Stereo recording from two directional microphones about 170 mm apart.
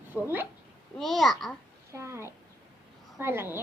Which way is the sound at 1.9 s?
15° right (ahead or behind).